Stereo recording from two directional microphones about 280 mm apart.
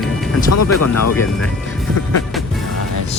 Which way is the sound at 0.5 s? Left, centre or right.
Left.